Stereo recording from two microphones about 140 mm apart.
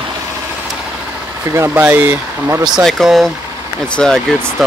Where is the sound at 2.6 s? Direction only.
Centre (ahead or behind).